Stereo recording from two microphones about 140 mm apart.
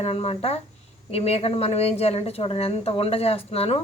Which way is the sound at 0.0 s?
45° left (ahead or behind).